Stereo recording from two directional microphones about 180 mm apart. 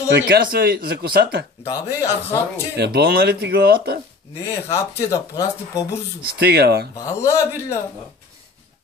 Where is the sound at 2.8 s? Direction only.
65° right (ahead or behind).